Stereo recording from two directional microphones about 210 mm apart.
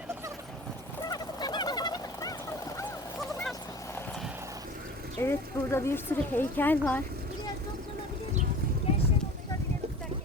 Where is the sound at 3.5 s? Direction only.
15° left (ahead or behind).